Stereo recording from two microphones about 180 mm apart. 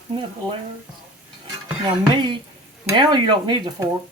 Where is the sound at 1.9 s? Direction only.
25° right (ahead or behind).